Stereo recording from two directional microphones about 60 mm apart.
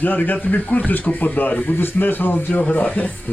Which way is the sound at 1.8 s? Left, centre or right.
Left.